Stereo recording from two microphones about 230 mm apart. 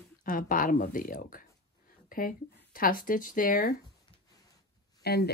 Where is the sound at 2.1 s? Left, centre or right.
Left.